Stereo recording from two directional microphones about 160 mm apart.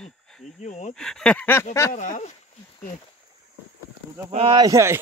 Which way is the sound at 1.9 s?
50° left (ahead or behind).